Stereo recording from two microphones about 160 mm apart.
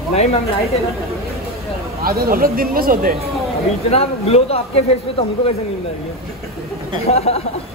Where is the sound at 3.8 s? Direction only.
40° left (ahead or behind).